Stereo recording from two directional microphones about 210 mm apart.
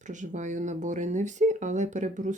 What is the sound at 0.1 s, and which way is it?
Speech, 35° right (ahead or behind).